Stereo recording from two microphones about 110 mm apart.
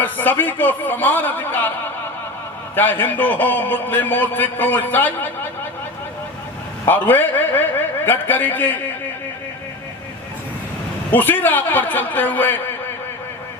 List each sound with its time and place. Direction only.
0.0 s a man's voice: 15° left (ahead or behind)
2.7 s a man's voice: 20° left (ahead or behind)
6.8 s a man's voice: 20° left (ahead or behind)
11.1 s a man's voice: 15° left (ahead or behind)